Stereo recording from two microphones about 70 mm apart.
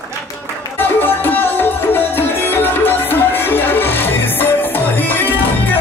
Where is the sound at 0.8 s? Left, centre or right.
Left.